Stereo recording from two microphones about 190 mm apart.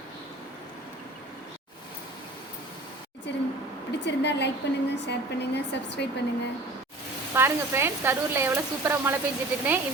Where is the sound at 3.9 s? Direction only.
65° left (ahead or behind).